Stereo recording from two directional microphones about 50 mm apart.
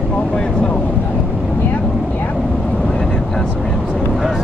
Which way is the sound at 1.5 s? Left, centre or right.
Left.